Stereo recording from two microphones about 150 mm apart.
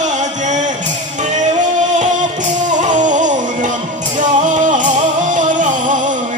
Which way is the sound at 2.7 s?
55° right (ahead or behind).